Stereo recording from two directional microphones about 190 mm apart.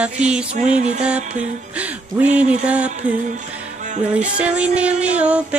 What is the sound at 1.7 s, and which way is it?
Music, 5° right (ahead or behind).